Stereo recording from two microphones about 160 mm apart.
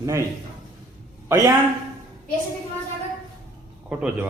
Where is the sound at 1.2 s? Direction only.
15° right (ahead or behind).